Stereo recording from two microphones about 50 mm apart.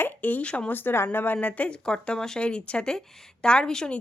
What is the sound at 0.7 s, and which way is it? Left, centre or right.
A woman's voice, left.